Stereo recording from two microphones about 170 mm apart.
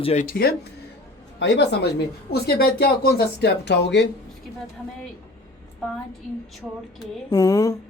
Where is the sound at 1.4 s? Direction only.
90° left.